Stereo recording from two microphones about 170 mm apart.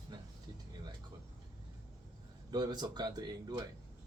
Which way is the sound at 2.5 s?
25° right (ahead or behind).